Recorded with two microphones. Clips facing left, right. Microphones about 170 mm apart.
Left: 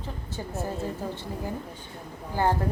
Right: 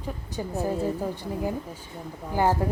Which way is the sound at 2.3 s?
15° right (ahead or behind).